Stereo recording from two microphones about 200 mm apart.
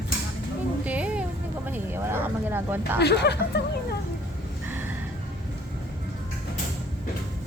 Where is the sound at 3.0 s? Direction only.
55° left (ahead or behind).